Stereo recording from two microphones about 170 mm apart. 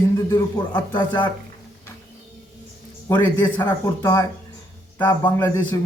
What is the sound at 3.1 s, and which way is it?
A man's voice, 15° left (ahead or behind).